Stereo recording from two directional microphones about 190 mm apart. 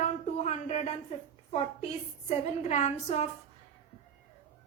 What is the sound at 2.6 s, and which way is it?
Speech, 35° left (ahead or behind).